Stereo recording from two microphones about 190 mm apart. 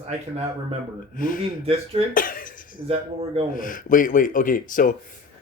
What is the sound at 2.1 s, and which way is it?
Speech, 45° left (ahead or behind).